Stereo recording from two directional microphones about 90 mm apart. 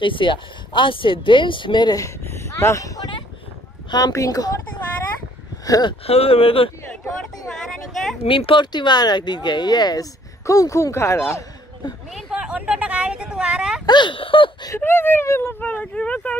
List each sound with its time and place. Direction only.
0.0 s speech: 65° left (ahead or behind)
2.0 s speech: 30° left (ahead or behind)
5.7 s speech: 50° left (ahead or behind)
6.0 s speech: 90° left
7.4 s a sound: centre (ahead or behind)
8.3 s speech: 75° left (ahead or behind); by 10.0 s 50° left (ahead or behind)
10.4 s speech: 35° left (ahead or behind)
12.1 s speech: 5° right (ahead or behind)
13.8 s speech: 60° left (ahead or behind)
14.8 s speech: 25° left (ahead or behind)
15.6 s speech: 15° left (ahead or behind)